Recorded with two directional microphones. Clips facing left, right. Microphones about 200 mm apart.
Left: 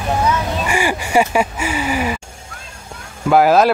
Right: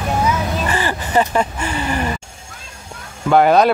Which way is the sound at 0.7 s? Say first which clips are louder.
Left 2 dB; 10° left (ahead or behind).